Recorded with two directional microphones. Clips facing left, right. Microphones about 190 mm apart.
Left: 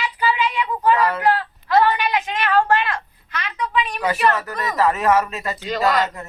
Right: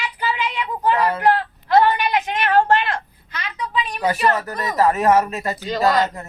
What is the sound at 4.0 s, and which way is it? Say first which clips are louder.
Speech: right 2 dB; 35° right (ahead or behind).